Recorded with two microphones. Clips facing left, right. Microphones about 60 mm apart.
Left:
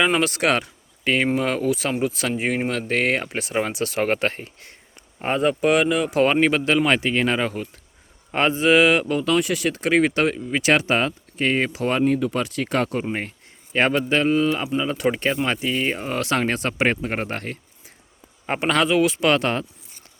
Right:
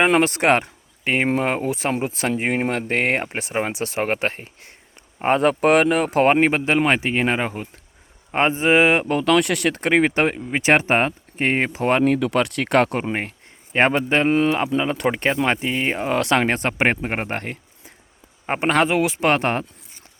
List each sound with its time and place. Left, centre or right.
0.0 s speech: right; by 4.7 s centre
5.2 s speech: right
6.4 s speech: right
9.0 s speech: right
12.0 s speech: right
13.7 s speech: right
16.5 s speech: right